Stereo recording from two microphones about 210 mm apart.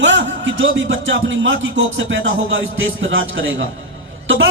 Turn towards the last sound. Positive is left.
turn(degrees=-65)  # may be behind; listen again after turning